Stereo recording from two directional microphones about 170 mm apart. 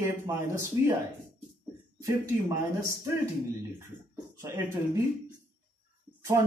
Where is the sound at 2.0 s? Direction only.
20° right (ahead or behind).